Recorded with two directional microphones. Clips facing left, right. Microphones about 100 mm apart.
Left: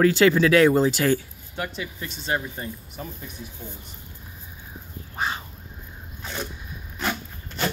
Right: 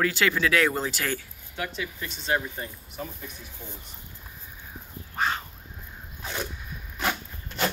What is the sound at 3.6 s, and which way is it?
Speech, 25° left (ahead or behind).